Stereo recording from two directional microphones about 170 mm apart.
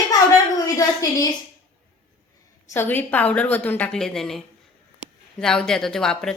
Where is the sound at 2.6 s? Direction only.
15° left (ahead or behind).